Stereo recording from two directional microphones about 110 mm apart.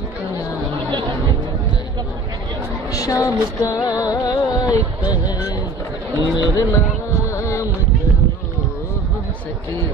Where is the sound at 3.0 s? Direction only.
30° left (ahead or behind).